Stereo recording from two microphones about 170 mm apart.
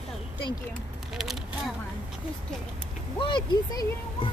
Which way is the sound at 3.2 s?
30° left (ahead or behind).